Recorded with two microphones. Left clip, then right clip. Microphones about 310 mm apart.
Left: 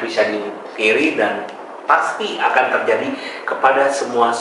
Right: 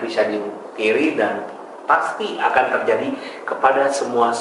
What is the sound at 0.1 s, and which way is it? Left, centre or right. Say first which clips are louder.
A man's voice: left 2 dB; centre.